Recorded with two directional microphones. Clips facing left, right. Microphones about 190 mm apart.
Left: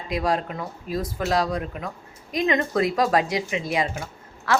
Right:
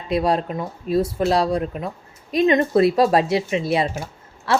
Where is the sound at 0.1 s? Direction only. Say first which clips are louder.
Right 5 dB; 30° right (ahead or behind).